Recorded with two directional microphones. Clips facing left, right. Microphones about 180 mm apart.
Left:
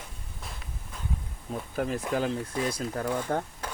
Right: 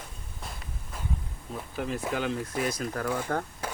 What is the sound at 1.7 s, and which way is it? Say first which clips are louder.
Speech: left 2 dB; 40° left (ahead or behind).